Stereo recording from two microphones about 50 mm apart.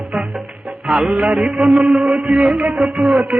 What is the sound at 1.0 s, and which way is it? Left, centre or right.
Music, right.